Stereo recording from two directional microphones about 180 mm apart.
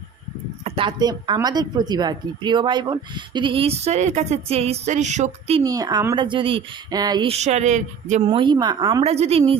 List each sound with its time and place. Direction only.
0.6 s a woman's voice: 30° right (ahead or behind)
5.6 s a woman's voice: 20° right (ahead or behind); by 8.2 s 40° right (ahead or behind)
8.3 s a woman's voice: 25° right (ahead or behind)
9.1 s a woman's voice: 35° right (ahead or behind)